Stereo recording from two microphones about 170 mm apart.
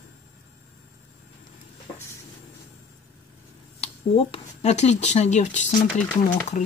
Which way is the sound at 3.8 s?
35° left (ahead or behind).